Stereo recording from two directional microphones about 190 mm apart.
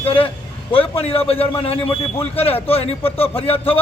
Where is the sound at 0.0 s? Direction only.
30° left (ahead or behind).